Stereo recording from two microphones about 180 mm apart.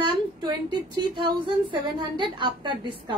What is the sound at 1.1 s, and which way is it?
A woman's voice, 25° right (ahead or behind).